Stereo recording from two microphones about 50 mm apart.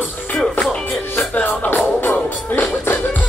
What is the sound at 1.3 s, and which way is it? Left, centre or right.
Music, left.